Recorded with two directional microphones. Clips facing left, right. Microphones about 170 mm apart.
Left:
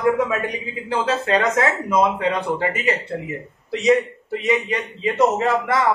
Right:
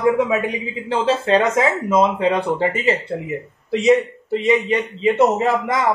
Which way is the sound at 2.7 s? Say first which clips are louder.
Right 3 dB; 25° right (ahead or behind).